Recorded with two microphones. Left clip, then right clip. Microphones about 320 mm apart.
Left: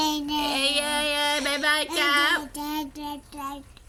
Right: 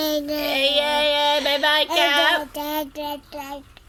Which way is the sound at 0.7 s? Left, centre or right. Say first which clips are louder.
Right 6 dB; right.